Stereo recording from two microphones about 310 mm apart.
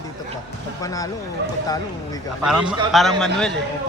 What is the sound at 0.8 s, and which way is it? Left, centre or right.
Speech, centre.